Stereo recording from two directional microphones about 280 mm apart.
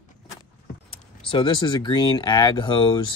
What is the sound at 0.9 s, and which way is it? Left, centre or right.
Speech, centre.